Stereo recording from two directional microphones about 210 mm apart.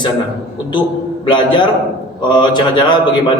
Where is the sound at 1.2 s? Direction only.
20° left (ahead or behind).